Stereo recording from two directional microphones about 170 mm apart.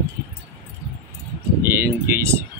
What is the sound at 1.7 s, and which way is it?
Vehicle, 15° right (ahead or behind).